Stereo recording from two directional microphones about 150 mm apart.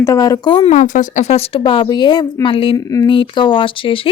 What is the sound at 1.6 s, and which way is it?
A woman's voice, 30° left (ahead or behind).